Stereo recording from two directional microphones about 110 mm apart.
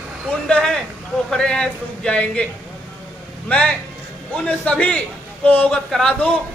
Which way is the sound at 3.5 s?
10° left (ahead or behind).